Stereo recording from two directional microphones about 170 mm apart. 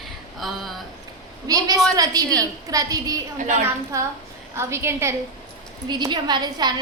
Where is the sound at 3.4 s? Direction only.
45° right (ahead or behind).